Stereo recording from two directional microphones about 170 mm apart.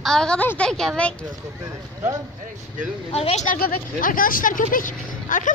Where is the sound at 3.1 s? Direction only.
40° left (ahead or behind).